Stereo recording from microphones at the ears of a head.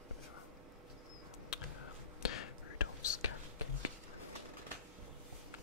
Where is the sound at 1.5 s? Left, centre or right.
Left.